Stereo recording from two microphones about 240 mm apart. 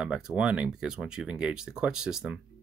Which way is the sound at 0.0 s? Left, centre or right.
Centre.